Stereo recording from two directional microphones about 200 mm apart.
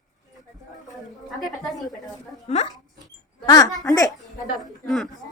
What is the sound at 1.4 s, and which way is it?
Speech, centre (ahead or behind).